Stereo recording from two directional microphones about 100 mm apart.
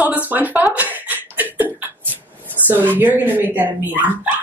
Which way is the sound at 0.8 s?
15° right (ahead or behind).